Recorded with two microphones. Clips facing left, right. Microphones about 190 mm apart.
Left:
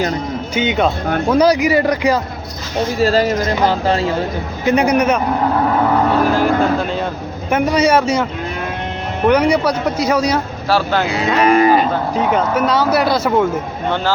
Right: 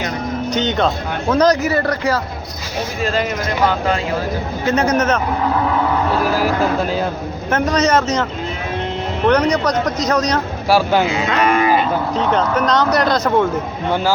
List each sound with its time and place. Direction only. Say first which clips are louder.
0.5 s speech: left 2 dB; 10° left (ahead or behind)
3.0 s speech: left 6 dB; 35° left (ahead or behind)
4.6 s speech: left 3 dB; 15° left (ahead or behind)
6.3 s speech: left 2 dB; 5° right (ahead or behind)
7.5 s speech: left 2 dB; 10° left (ahead or behind)
10.7 s speech: right 2 dB; 10° right (ahead or behind)
11.3 s speech: left 4 dB; 35° left (ahead or behind)
12.1 s speech: left 1 dB; 10° left (ahead or behind)